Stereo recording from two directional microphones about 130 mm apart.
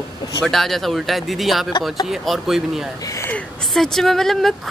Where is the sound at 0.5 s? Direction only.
Centre (ahead or behind).